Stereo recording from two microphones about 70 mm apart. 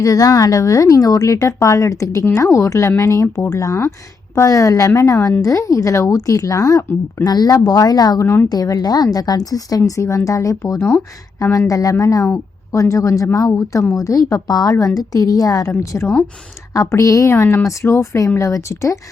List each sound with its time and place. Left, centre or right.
0.0 s a woman's voice: left
7.3 s a woman's voice: left
10.8 s speech: left
11.7 s a woman's voice: left
15.8 s speech: left
17.3 s speech: left